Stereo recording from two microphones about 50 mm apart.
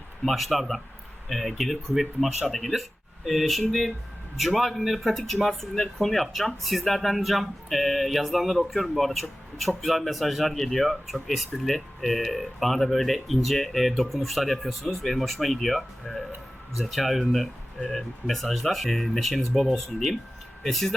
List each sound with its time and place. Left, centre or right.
0.3 s speech: centre